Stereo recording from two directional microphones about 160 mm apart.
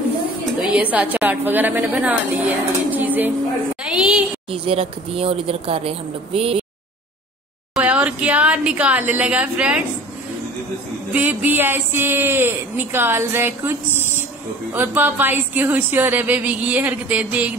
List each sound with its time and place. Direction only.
0.6 s a woman's voice: 10° right (ahead or behind)
3.9 s a sound: 5° right (ahead or behind)
4.5 s speech: 35° right (ahead or behind)
7.7 s a woman's voice: 10° right (ahead or behind)
11.1 s a woman's voice: 10° right (ahead or behind)
14.7 s a woman's voice: 10° right (ahead or behind)